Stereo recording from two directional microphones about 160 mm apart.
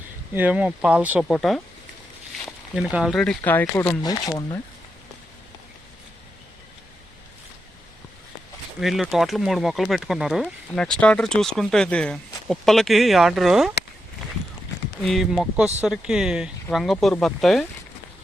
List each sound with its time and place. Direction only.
0.3 s speech: 10° right (ahead or behind)
1.3 s speech: 5° left (ahead or behind)
4.0 s speech: 25° left (ahead or behind)
8.8 s speech: centre (ahead or behind)
15.0 s speech: centre (ahead or behind)